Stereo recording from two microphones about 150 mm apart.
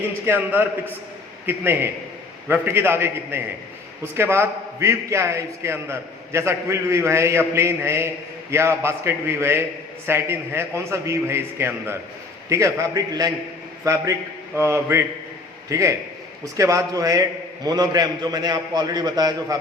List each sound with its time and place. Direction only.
0.3 s a man's voice: 15° right (ahead or behind)